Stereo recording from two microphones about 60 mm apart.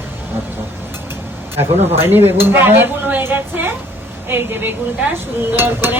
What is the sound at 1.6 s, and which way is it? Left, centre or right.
Speech, right.